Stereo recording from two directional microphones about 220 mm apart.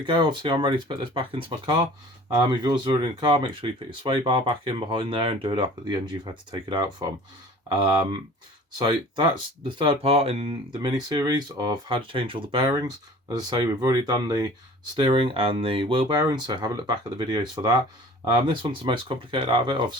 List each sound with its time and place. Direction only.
0.0 s speech: 20° right (ahead or behind)
8.8 s speech: 20° right (ahead or behind)